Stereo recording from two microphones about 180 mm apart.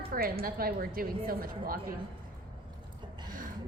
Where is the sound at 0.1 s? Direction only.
55° right (ahead or behind).